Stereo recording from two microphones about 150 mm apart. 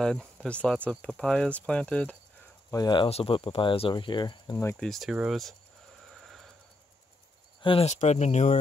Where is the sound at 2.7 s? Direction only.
25° left (ahead or behind).